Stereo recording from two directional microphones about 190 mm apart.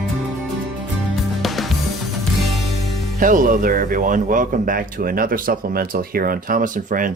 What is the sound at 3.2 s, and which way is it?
Speech, 45° right (ahead or behind).